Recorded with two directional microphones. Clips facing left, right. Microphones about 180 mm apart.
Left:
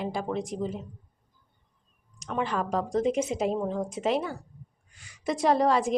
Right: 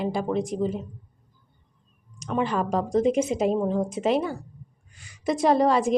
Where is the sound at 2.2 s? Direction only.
15° right (ahead or behind).